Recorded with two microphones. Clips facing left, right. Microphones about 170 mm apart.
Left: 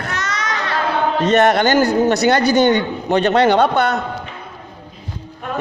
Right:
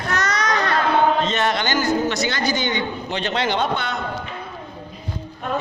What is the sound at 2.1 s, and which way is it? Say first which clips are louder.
A man's voice: left 9 dB; 65° left (ahead or behind).